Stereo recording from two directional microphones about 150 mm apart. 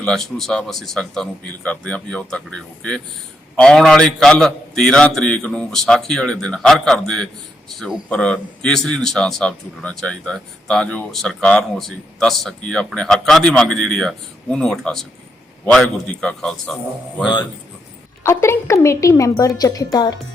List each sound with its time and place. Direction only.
0.0 s speech: 5° left (ahead or behind)
18.2 s a woman's voice: 15° left (ahead or behind)